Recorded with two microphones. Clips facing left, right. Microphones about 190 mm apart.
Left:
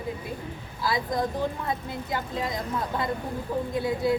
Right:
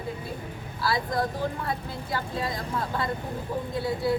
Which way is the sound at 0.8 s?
20° left (ahead or behind).